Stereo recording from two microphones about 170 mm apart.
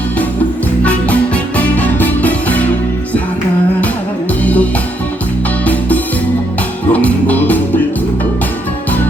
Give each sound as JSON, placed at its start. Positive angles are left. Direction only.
{"t": 0.9, "sound": "music", "side_deg": 10}
{"t": 4.4, "sound": "music", "side_deg": 10}
{"t": 6.9, "sound": "music", "side_deg": 10}